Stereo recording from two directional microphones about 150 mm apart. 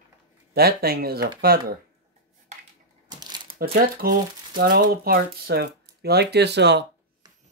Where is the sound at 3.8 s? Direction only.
80° right.